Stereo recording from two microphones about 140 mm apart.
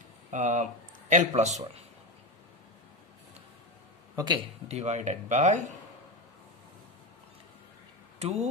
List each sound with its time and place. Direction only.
0.3 s speech: 60° right (ahead or behind)
4.1 s a sound: 30° right (ahead or behind)
4.6 s speech: 50° right (ahead or behind)
8.2 s speech: 50° right (ahead or behind)